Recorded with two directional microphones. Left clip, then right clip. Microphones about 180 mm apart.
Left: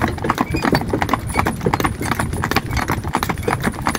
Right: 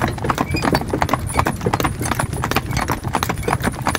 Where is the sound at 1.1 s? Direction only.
10° left (ahead or behind).